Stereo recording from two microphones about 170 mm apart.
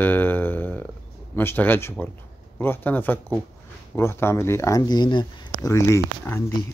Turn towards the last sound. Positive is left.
turn(degrees=15)  # may be behind; listen again after turning